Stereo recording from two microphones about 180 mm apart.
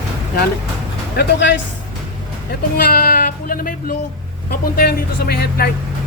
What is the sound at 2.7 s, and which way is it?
Speech, 55° left (ahead or behind).